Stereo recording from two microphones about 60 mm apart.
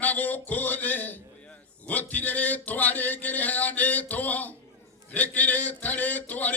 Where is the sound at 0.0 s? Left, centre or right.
Left.